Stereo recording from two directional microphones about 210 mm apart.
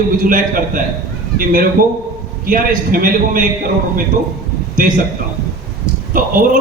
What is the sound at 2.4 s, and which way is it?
A man's voice, 40° right (ahead or behind).